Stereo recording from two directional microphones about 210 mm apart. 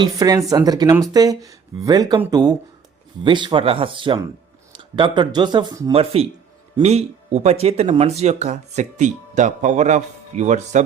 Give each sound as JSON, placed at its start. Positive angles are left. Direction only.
{"t": 0.0, "sound": "speech", "side_deg": -15}